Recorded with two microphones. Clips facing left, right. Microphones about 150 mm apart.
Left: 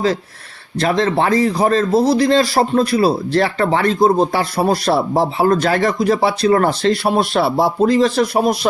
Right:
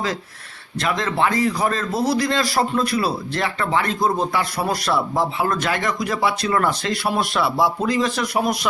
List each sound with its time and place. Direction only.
0.8 s speech: 35° left (ahead or behind)